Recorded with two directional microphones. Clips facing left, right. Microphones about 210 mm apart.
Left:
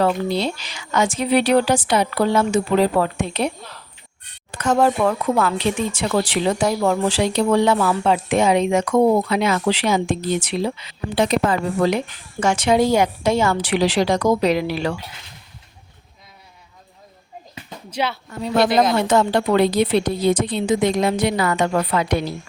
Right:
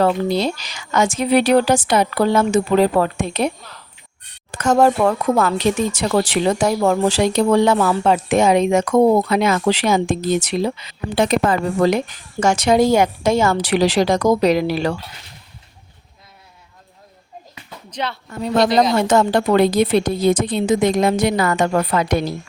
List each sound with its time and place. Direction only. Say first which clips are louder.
0.0 s speech: right 2 dB; 45° right (ahead or behind)
4.5 s speech: right 3 dB; 45° right (ahead or behind)
17.9 s speech: left 2 dB; 5° left (ahead or behind)
18.9 s speech: right 2 dB; 45° right (ahead or behind)